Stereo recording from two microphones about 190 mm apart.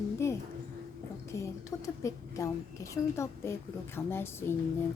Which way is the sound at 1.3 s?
15° left (ahead or behind).